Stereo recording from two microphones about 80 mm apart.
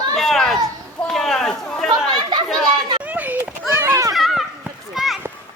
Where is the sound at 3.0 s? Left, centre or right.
Right.